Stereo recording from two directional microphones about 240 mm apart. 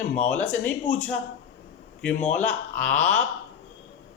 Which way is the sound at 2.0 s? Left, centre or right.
Centre.